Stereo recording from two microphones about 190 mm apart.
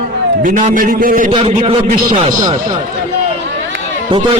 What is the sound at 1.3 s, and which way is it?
Speech, 30° right (ahead or behind).